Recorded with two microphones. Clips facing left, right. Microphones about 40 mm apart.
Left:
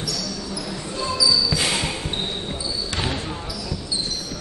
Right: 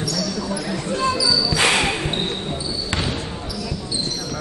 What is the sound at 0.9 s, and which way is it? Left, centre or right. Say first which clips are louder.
Basketball bounce: right 1 dB; right.